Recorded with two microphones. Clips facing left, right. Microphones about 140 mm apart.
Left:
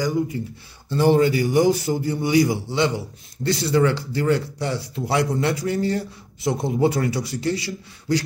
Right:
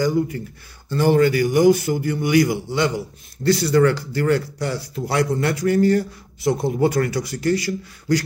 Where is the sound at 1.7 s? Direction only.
35° left (ahead or behind).